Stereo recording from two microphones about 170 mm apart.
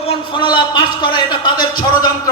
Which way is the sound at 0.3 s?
25° left (ahead or behind).